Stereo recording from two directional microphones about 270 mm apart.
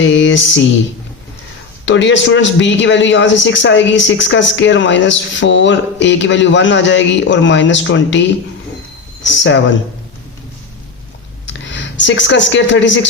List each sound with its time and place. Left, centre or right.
0.0 s mantra: left
1.8 s a man's voice: left
9.2 s a man's voice: left
11.4 s speech: left